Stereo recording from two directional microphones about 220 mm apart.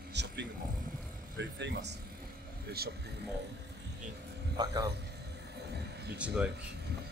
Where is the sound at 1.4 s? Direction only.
50° right (ahead or behind).